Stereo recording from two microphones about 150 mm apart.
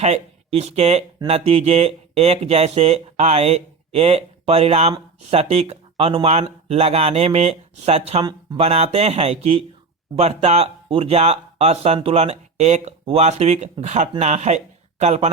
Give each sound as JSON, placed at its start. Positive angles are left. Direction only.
{"t": 0.0, "sound": "speech", "side_deg": -45}
{"t": 8.2, "sound": "speech", "side_deg": -25}
{"t": 8.5, "sound": "speech", "side_deg": -45}